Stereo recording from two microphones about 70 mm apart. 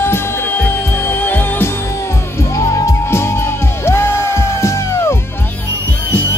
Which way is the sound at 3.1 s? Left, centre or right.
Left.